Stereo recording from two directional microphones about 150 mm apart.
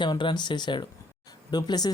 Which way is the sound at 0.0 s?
30° left (ahead or behind).